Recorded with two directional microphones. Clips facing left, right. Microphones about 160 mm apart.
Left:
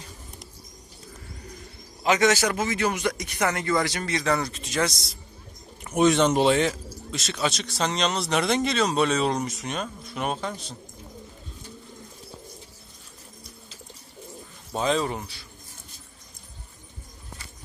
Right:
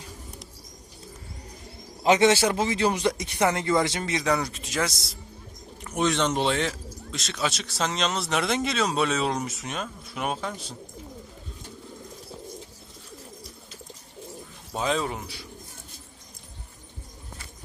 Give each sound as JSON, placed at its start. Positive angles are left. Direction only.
{"t": 2.0, "sound": "speech", "side_deg": -30}
{"t": 5.8, "sound": "speech", "side_deg": 10}
{"t": 14.7, "sound": "speech", "side_deg": -5}